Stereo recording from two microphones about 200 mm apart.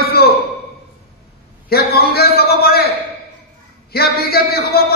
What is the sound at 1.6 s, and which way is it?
A man's voice, 50° left (ahead or behind).